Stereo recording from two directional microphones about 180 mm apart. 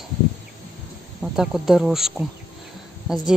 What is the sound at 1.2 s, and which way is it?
Speech, 5° right (ahead or behind).